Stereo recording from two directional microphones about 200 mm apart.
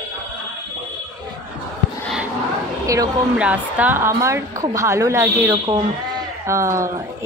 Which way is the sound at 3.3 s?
5° right (ahead or behind).